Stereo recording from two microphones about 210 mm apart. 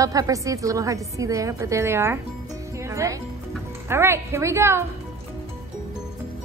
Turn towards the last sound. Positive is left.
turn(degrees=-10)  # may be behind; listen again after turning